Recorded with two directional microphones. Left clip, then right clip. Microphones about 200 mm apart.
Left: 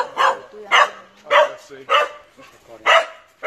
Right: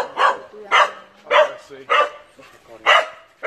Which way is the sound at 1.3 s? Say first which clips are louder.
Even; 25° left (ahead or behind).